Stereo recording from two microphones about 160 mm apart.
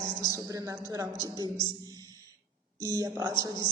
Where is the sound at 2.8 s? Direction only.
20° right (ahead or behind).